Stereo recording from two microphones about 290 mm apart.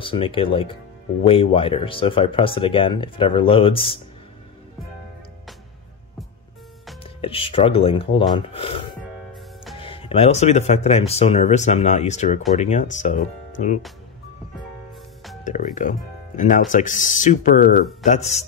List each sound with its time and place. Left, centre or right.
0.0 s speech: centre
7.0 s speech: centre
9.0 s music: centre
9.8 s speech: centre
15.4 s speech: left